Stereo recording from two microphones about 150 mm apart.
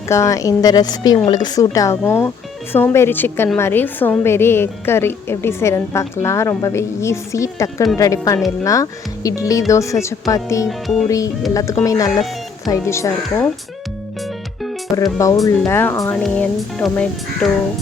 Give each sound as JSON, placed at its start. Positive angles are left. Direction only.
{"t": 0.1, "sound": "a woman's voice", "side_deg": 20}
{"t": 10.7, "sound": "music", "side_deg": 0}
{"t": 11.5, "sound": "speech", "side_deg": 20}
{"t": 14.9, "sound": "a woman's voice", "side_deg": 20}
{"t": 16.2, "sound": "music", "side_deg": 5}